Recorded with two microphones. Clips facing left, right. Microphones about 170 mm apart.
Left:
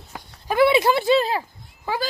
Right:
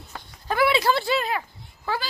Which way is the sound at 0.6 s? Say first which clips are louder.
Left 5 dB; 20° left (ahead or behind).